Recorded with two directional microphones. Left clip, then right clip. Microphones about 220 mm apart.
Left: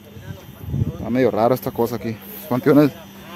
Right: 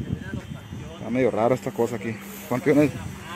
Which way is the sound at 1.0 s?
25° left (ahead or behind).